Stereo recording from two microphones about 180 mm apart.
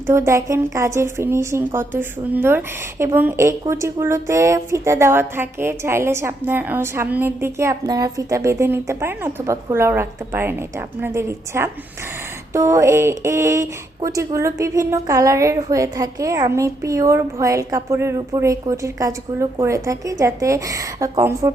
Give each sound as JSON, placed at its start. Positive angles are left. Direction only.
{"t": 0.1, "sound": "a woman's voice", "side_deg": -15}